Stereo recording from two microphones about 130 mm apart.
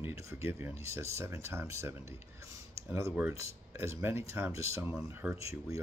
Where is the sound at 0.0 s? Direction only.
25° right (ahead or behind).